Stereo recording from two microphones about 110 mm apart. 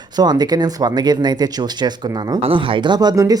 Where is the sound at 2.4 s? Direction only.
55° right (ahead or behind); by 3.3 s 35° right (ahead or behind).